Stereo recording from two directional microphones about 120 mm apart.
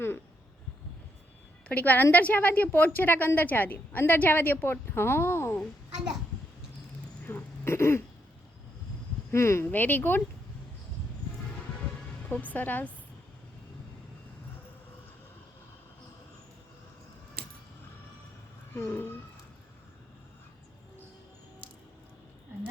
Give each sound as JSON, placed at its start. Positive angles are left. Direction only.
{"t": 1.6, "sound": "a woman's voice", "side_deg": 15}
{"t": 7.3, "sound": "speech", "side_deg": 20}
{"t": 9.3, "sound": "a woman's voice", "side_deg": 25}
{"t": 12.3, "sound": "a woman's voice", "side_deg": 15}
{"t": 18.7, "sound": "a woman's voice", "side_deg": 15}